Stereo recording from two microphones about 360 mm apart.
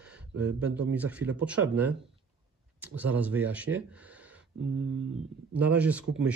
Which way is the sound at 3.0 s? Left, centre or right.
Centre.